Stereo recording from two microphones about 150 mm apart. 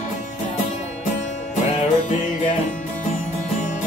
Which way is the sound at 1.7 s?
55° left (ahead or behind).